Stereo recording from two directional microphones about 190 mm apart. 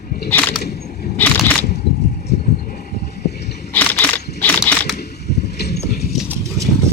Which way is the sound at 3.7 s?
10° left (ahead or behind).